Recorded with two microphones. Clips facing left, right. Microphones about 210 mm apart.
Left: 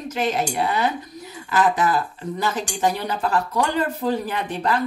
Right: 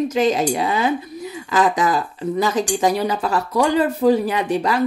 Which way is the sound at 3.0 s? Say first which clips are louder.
Right 2 dB; 10° right (ahead or behind).